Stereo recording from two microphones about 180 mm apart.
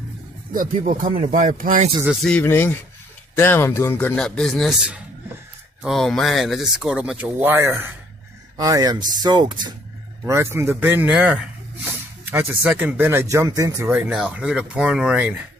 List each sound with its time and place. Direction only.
0.5 s speech: 50° right (ahead or behind)
2.0 s a man's voice: 5° left (ahead or behind); by 13.9 s 20° right (ahead or behind)
13.9 s speech: 5° right (ahead or behind)